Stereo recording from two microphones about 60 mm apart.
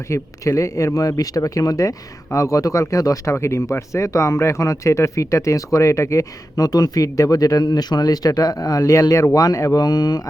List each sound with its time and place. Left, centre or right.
0.1 s speech: left
3.3 s speech: left
6.6 s speech: left
9.3 s speech: left